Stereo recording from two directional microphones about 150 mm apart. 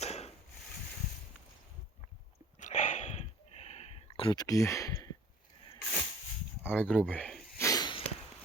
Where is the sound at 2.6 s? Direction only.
55° left (ahead or behind).